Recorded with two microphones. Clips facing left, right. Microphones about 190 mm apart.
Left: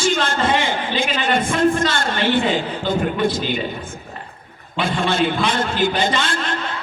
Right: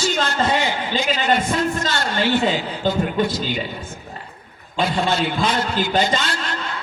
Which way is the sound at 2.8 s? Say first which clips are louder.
Right 1 dB; 45° right (ahead or behind).